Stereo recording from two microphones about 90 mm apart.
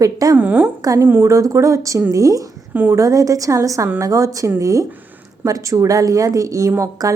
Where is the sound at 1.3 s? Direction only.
35° right (ahead or behind).